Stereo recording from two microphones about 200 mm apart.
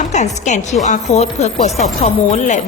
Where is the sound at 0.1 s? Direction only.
35° left (ahead or behind).